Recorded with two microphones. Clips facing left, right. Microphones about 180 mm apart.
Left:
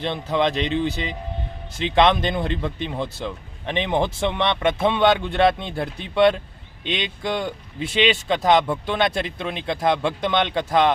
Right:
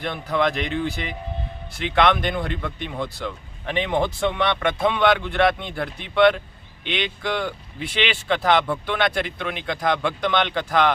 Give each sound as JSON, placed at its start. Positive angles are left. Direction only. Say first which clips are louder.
{"t": 0.0, "sound": "speech", "louder": "left 1 dB", "side_deg": 20}